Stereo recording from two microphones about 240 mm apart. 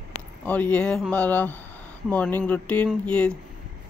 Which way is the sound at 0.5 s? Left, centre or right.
Centre.